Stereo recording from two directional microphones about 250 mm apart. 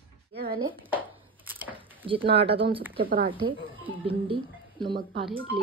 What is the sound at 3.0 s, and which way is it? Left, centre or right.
Speech, right.